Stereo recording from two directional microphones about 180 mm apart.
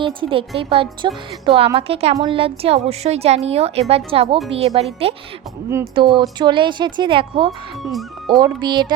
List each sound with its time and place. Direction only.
0.0 s a woman's voice: 30° right (ahead or behind)
7.8 s speech: centre (ahead or behind)
8.4 s a woman's voice: 25° right (ahead or behind)